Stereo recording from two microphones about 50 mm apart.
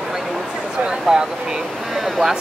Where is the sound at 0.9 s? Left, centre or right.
Centre.